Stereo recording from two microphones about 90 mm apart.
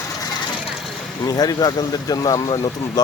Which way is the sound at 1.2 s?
45° left (ahead or behind).